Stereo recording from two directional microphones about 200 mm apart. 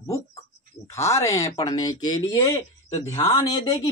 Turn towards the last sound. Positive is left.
turn(degrees=20)  # may be behind; listen again after turning